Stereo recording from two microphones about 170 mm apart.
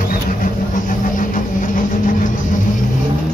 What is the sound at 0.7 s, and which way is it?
Vehicle, 50° left (ahead or behind).